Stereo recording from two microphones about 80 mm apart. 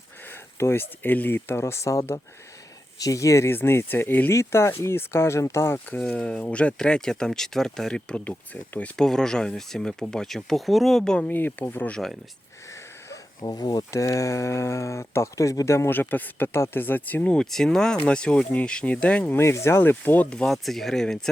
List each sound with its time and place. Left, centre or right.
0.3 s speech: left
5.9 s speech: centre
11.3 s speech: left
11.9 s speech: centre
13.4 s speech: left
15.9 s speech: left
17.3 s speech: centre
19.3 s speech: left
20.3 s speech: centre